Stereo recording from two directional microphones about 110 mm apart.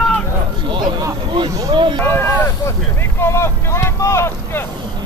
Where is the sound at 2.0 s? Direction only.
20° left (ahead or behind).